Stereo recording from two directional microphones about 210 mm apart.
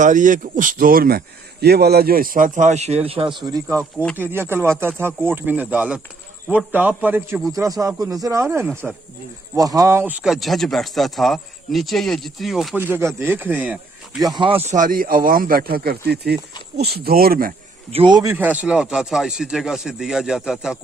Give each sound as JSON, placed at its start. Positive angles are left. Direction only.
{"t": 0.0, "sound": "a man's voice", "side_deg": -40}
{"t": 3.8, "sound": "speech", "side_deg": 5}
{"t": 4.2, "sound": "speech", "side_deg": -10}
{"t": 8.4, "sound": "speech", "side_deg": -5}
{"t": 9.6, "sound": "speech", "side_deg": -15}
{"t": 14.2, "sound": "a man's voice", "side_deg": -20}
{"t": 17.9, "sound": "speech", "side_deg": -20}